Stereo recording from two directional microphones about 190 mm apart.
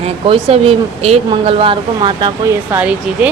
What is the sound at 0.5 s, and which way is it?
Speech, 35° right (ahead or behind).